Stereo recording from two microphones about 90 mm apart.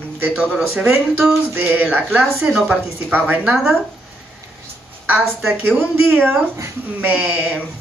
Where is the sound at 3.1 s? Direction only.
20° right (ahead or behind).